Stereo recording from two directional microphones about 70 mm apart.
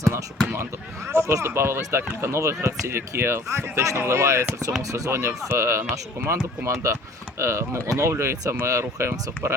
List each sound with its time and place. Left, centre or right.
0.0 s speech: right
0.5 s speech: right
4.8 s speech: right